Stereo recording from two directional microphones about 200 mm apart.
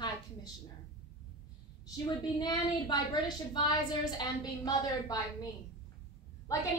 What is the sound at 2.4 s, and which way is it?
Speech, 20° left (ahead or behind).